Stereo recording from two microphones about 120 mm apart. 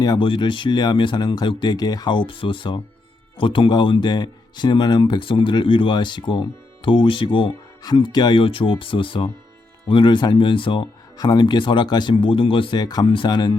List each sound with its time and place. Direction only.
0.0 s speech: 40° left (ahead or behind)